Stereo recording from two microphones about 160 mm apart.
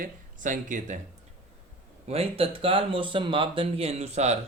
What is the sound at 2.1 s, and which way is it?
Speech, 35° right (ahead or behind).